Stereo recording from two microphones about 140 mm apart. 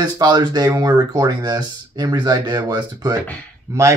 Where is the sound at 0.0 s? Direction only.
30° right (ahead or behind).